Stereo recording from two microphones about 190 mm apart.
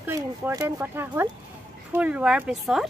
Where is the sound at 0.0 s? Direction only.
15° right (ahead or behind).